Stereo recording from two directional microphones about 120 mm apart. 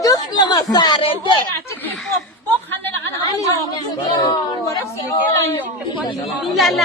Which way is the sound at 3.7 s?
35° left (ahead or behind).